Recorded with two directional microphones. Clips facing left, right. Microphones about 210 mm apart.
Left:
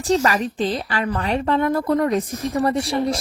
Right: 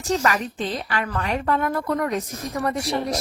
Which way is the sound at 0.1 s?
30° left (ahead or behind).